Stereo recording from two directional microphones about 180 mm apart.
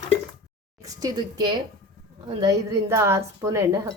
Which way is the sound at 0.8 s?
20° right (ahead or behind).